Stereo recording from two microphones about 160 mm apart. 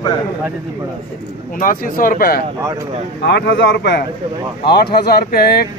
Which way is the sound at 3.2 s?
90° left.